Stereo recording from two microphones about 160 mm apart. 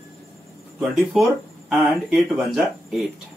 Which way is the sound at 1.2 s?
Centre (ahead or behind).